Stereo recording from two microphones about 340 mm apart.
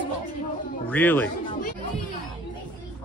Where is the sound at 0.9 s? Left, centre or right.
Centre.